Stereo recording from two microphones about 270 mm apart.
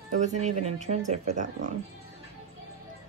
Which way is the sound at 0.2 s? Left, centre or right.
Right.